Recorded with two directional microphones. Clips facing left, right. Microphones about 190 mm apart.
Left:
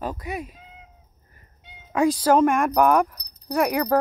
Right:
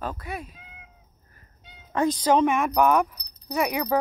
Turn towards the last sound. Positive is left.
turn(degrees=5)  # may be behind; listen again after turning